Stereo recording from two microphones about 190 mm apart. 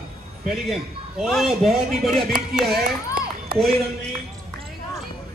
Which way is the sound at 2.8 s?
50° right (ahead or behind).